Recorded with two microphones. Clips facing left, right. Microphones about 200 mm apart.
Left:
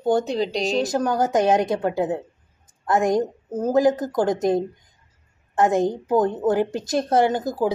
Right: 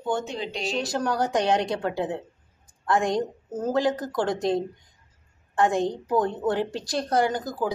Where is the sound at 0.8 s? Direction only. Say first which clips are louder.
Left 3 dB; 20° left (ahead or behind).